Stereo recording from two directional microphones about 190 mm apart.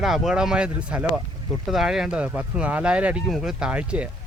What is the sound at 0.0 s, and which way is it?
Speech, centre (ahead or behind).